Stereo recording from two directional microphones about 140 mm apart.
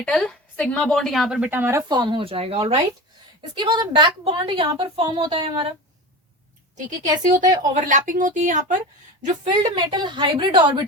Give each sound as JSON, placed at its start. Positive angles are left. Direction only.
{"t": 0.0, "sound": "a woman's voice", "side_deg": 5}
{"t": 1.5, "sound": "speech", "side_deg": -15}
{"t": 1.9, "sound": "a woman's voice", "side_deg": -35}
{"t": 3.5, "sound": "a woman's voice", "side_deg": -35}
{"t": 7.3, "sound": "speech", "side_deg": -65}
{"t": 9.5, "sound": "a woman's voice", "side_deg": -35}